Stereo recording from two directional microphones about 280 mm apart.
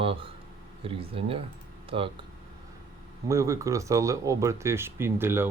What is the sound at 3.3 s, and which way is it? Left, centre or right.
Speech, centre.